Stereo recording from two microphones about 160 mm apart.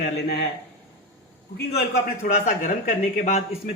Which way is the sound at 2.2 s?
55° left (ahead or behind).